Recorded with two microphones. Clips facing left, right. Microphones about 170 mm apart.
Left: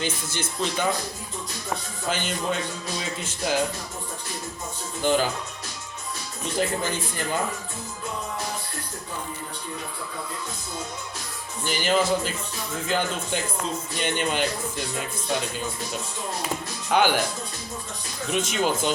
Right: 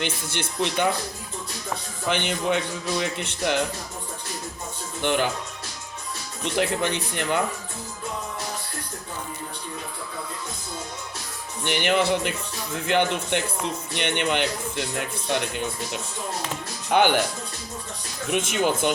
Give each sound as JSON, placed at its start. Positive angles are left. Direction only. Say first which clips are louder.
{"t": 0.0, "sound": "speech", "louder": "even", "side_deg": -65}
{"t": 2.0, "sound": "speech", "louder": "right 3 dB", "side_deg": -65}
{"t": 5.0, "sound": "speech", "louder": "left 1 dB", "side_deg": -65}
{"t": 6.4, "sound": "speech", "louder": "right 2 dB", "side_deg": -70}
{"t": 11.6, "sound": "speech", "louder": "right 1 dB", "side_deg": -65}
{"t": 16.9, "sound": "speech", "louder": "right 1 dB", "side_deg": -55}
{"t": 18.3, "sound": "speech", "louder": "right 1 dB", "side_deg": -55}